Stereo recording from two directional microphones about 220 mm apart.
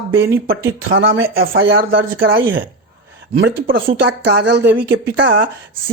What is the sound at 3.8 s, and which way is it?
Speech, 55° right (ahead or behind).